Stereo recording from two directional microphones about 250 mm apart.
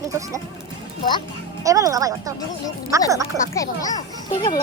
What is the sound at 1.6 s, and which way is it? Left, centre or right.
Speech, centre.